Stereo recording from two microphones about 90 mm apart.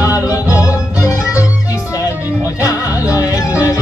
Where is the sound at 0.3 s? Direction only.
40° left (ahead or behind).